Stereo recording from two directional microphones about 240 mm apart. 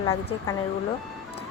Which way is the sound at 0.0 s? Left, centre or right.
Centre.